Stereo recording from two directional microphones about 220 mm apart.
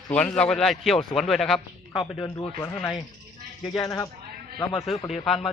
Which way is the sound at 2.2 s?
15° left (ahead or behind).